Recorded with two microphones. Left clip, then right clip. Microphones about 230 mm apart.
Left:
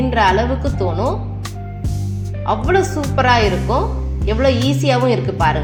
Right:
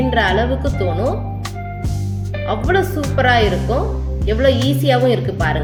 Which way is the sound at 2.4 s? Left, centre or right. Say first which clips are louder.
Left 1 dB; centre.